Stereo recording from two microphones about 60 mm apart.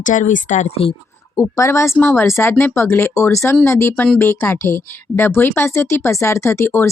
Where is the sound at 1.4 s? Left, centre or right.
Left.